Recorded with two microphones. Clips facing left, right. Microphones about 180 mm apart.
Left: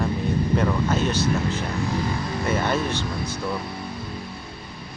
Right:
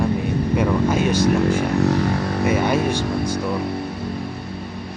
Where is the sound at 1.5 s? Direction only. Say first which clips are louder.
Right 8 dB; 60° right (ahead or behind).